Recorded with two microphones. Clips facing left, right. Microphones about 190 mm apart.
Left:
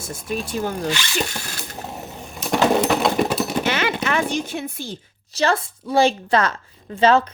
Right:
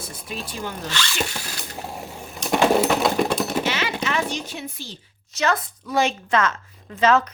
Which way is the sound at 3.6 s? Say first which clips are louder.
Left 3 dB; 55° left (ahead or behind).